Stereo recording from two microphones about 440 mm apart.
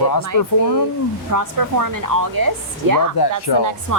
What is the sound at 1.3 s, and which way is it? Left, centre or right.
Speech, right.